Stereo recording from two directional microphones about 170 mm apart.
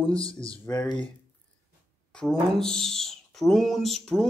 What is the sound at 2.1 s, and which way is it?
Speech, centre (ahead or behind).